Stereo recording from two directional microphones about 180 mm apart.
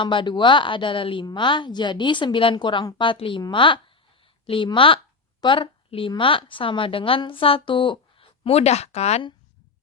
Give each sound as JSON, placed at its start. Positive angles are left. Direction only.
{"t": 0.0, "sound": "a woman's voice", "side_deg": 25}